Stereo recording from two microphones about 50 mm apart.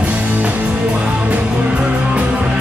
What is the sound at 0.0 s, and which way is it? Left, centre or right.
Music, right.